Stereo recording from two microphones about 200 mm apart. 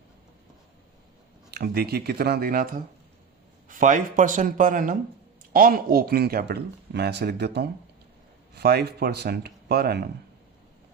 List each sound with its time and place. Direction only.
1.5 s speech: 55° right (ahead or behind)